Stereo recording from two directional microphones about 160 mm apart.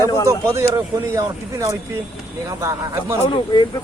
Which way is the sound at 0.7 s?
20° right (ahead or behind).